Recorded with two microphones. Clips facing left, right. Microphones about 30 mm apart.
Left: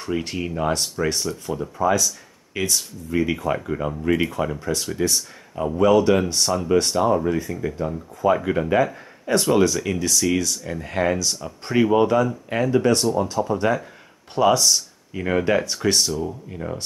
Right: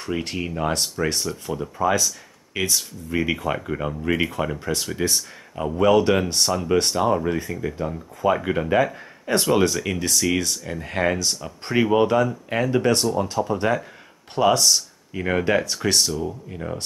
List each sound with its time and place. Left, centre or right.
0.0 s speech: centre